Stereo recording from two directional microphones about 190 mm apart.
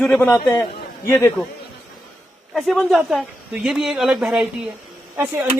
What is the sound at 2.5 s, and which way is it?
Speech, centre (ahead or behind).